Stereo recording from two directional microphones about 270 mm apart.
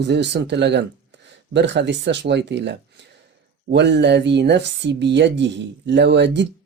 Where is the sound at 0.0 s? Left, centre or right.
Right.